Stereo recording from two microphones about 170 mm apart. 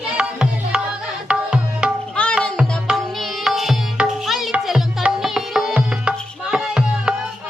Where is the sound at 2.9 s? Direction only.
Centre (ahead or behind).